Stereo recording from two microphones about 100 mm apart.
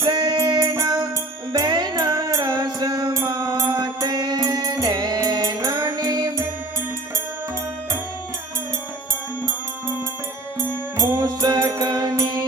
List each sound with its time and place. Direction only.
0.0 s music: 40° right (ahead or behind)
10.9 s music: 40° right (ahead or behind)